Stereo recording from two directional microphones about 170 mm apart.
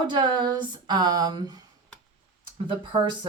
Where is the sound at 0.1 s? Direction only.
25° right (ahead or behind).